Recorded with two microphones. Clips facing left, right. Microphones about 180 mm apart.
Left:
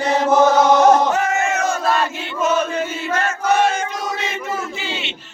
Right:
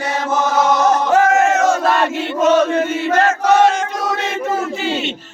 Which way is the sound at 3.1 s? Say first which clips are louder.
Right 5 dB; 80° right.